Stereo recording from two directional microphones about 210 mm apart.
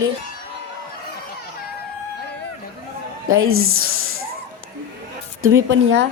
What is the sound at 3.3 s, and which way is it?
Speech, 80° right.